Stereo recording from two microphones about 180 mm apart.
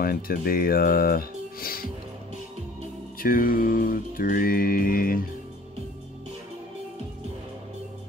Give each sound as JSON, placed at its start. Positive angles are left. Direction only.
{"t": 0.0, "sound": "speech", "side_deg": 55}
{"t": 3.2, "sound": "music", "side_deg": 50}